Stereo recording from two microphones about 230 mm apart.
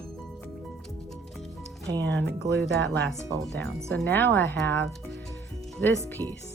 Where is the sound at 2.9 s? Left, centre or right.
Centre.